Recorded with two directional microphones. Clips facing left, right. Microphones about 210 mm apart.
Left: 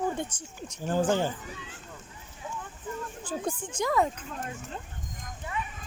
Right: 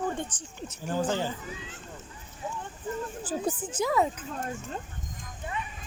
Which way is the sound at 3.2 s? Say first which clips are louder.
Right 1 dB; 5° right (ahead or behind).